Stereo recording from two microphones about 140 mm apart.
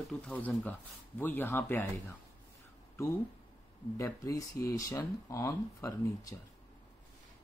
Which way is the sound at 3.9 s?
25° left (ahead or behind).